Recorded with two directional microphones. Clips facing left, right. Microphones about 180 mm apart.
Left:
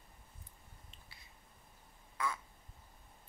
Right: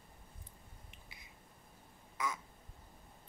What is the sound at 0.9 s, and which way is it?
Finger snapping, 15° right (ahead or behind).